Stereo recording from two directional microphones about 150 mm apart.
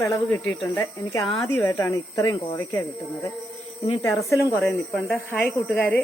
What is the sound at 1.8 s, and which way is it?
Speech, 25° left (ahead or behind).